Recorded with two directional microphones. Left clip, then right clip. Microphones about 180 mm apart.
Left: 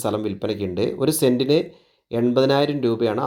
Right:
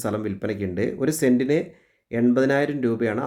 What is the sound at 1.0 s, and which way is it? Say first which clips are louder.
Speech: left 3 dB; 30° right (ahead or behind).